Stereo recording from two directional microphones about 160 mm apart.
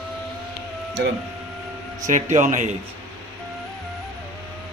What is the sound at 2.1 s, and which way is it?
Speech, 50° right (ahead or behind).